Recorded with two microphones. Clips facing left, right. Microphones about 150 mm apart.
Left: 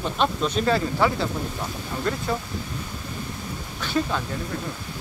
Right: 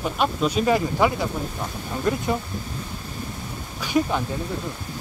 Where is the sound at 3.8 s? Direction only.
15° right (ahead or behind).